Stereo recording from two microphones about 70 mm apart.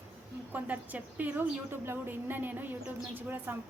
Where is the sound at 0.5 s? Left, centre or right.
Right.